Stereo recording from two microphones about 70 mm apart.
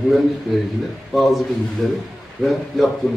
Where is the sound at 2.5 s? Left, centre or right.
Centre.